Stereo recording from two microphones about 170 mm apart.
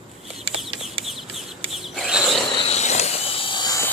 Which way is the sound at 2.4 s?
35° left (ahead or behind).